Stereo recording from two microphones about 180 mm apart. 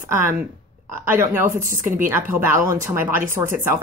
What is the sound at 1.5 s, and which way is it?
Speech, 45° right (ahead or behind).